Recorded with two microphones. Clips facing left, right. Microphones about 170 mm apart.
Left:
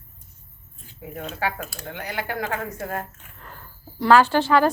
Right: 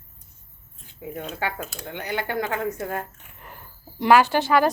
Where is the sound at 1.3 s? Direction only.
20° right (ahead or behind).